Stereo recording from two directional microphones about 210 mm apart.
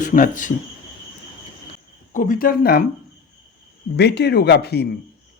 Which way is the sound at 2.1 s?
40° left (ahead or behind).